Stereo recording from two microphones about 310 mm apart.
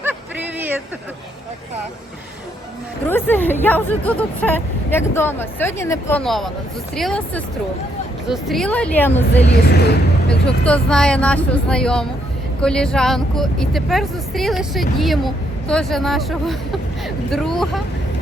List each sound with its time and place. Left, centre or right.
3.1 s a woman's voice: centre
9.3 s speech: left
10.7 s a woman's voice: centre